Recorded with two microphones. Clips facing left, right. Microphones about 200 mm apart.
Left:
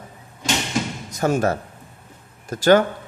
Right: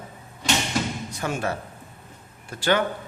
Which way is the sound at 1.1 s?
40° left (ahead or behind).